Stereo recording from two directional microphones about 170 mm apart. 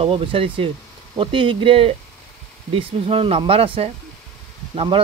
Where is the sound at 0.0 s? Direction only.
30° right (ahead or behind).